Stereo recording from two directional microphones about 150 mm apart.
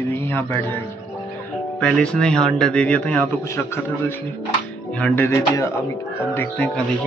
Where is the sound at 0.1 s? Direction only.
15° left (ahead or behind).